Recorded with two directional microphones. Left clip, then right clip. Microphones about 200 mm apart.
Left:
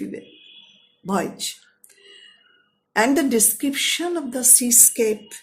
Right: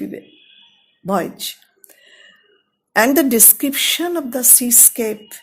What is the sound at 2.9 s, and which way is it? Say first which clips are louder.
Speech: right 5 dB; 50° right (ahead or behind).